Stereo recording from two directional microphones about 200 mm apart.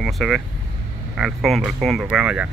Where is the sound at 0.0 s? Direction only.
Centre (ahead or behind).